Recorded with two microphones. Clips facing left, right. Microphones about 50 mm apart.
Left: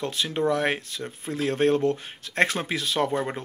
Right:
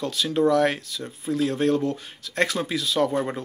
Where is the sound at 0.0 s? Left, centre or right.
Left.